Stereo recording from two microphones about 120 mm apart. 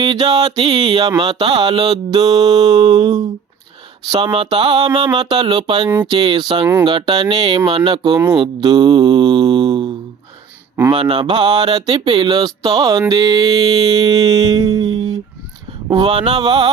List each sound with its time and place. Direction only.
0.0 s speech: 40° right (ahead or behind)
1.3 s speech: 50° right (ahead or behind)
1.6 s speech: 35° right (ahead or behind)
8.3 s mantra: 35° right (ahead or behind)
10.9 s speech: 45° right (ahead or behind)